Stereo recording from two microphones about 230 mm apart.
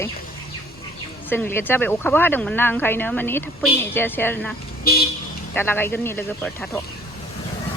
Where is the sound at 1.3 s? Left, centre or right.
Centre.